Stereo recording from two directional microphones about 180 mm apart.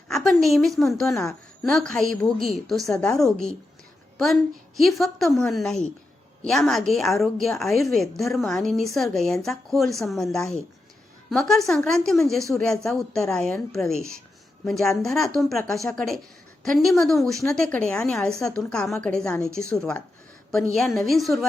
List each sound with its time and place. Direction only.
0.1 s a woman's voice: centre (ahead or behind)
4.8 s a woman's voice: centre (ahead or behind)